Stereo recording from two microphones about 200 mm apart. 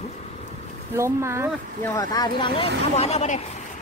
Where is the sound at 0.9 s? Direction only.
15° right (ahead or behind).